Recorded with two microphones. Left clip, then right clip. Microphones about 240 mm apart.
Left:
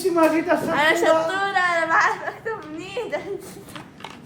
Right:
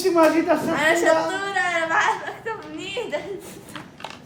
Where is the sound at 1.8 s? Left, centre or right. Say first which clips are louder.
Left 1 dB; centre.